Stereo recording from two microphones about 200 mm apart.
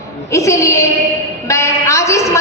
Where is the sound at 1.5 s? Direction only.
15° left (ahead or behind).